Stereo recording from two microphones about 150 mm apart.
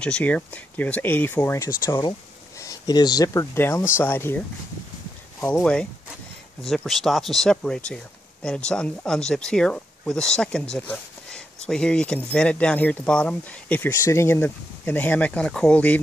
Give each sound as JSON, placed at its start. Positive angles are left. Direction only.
{"t": 0.0, "sound": "speech", "side_deg": 10}
{"t": 5.6, "sound": "speech", "side_deg": 5}